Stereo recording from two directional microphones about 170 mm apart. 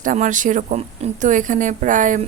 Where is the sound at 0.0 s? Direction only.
50° right (ahead or behind).